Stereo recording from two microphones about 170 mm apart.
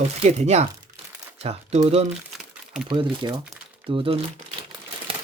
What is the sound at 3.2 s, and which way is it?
Speech, 25° right (ahead or behind).